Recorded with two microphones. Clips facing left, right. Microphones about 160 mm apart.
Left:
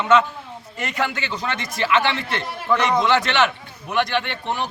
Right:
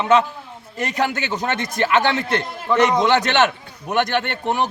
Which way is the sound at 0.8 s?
40° right (ahead or behind).